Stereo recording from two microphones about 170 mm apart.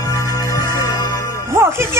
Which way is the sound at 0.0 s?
20° left (ahead or behind).